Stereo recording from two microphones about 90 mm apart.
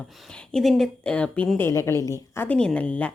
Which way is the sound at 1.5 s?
30° left (ahead or behind).